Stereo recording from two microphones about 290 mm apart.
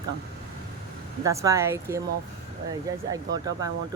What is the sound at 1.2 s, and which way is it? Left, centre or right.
Speech, centre.